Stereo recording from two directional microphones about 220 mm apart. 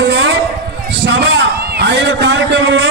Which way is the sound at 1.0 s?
55° right (ahead or behind).